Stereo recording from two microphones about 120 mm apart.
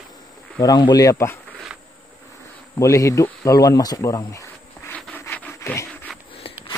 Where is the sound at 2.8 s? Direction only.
25° left (ahead or behind).